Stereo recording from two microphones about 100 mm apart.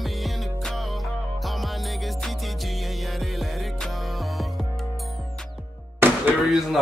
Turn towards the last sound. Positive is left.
turn(degrees=0)  # may be behind; listen again after turning